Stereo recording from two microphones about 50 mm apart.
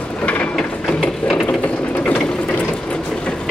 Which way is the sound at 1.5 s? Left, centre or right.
Left.